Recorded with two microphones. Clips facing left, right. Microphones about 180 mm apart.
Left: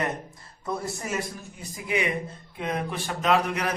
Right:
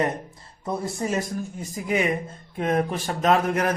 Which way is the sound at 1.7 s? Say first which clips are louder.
Right 3 dB; 45° right (ahead or behind).